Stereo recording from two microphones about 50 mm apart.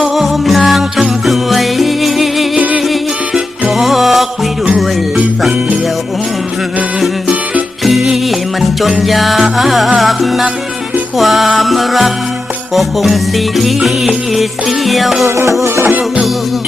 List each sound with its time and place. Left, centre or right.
0.0 s music: centre
2.6 s music: right
3.7 s music: centre
8.0 s music: centre
15.6 s music: right
15.9 s music: right